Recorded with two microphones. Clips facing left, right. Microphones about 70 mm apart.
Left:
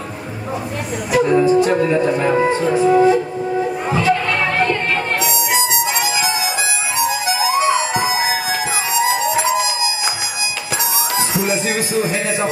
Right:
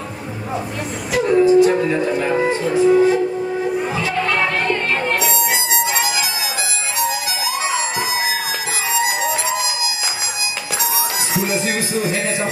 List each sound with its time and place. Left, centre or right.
1.1 s music: left
11.1 s music: left